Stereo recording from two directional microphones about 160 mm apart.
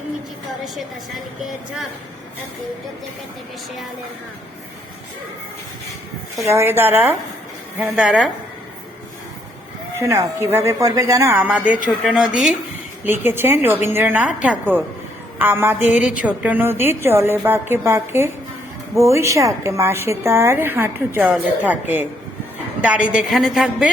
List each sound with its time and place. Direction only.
6.4 s a woman's voice: 15° right (ahead or behind)
10.0 s a woman's voice: 15° right (ahead or behind)
11.3 s a woman's voice: 10° right (ahead or behind)
23.0 s a woman's voice: 5° right (ahead or behind)